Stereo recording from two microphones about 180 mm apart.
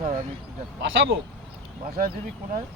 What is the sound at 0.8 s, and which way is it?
Speech, 90° right.